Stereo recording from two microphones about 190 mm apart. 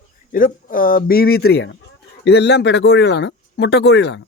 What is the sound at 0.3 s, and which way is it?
Speech, 45° left (ahead or behind).